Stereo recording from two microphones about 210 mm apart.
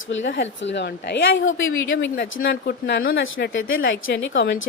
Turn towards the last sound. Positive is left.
turn(degrees=60)  # may be behind; listen again after turning